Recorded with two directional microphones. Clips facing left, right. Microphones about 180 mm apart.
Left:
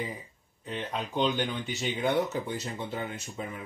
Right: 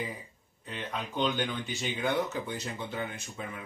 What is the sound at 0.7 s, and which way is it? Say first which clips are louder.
Speech: left 3 dB; 30° left (ahead or behind).